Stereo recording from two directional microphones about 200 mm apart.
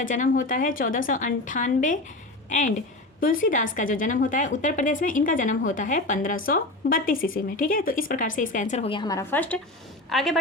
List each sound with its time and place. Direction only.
0.0 s a woman's voice: 40° left (ahead or behind); by 10.3 s centre (ahead or behind)